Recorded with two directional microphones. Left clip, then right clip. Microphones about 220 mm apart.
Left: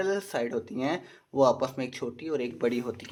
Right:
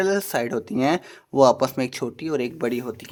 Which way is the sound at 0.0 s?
35° right (ahead or behind).